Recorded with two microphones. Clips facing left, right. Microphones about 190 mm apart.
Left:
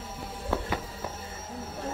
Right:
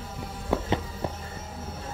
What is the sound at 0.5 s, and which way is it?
Music, 15° right (ahead or behind).